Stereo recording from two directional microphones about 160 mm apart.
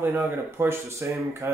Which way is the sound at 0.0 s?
15° right (ahead or behind).